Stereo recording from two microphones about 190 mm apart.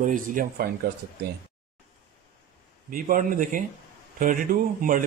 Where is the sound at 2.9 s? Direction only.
45° right (ahead or behind).